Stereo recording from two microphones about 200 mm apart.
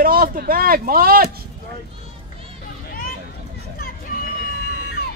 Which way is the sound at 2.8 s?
45° left (ahead or behind).